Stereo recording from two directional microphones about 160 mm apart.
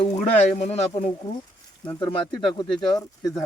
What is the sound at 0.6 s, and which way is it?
Speech, 45° left (ahead or behind).